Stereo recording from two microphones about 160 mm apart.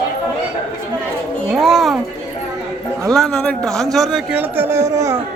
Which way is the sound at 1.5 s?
Centre (ahead or behind).